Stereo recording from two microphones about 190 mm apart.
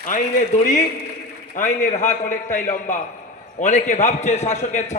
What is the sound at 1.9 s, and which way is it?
A man's voice, 40° left (ahead or behind).